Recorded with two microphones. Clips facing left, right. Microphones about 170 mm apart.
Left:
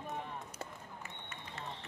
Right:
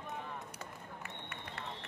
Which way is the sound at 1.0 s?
60° right (ahead or behind).